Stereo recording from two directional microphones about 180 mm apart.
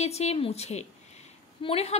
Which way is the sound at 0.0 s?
35° left (ahead or behind).